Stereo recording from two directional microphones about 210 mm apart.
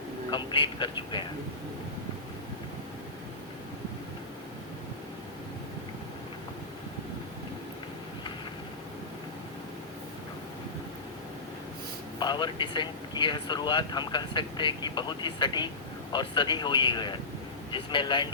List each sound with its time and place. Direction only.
0.3 s speech: 25° left (ahead or behind)
12.2 s speech: 20° left (ahead or behind)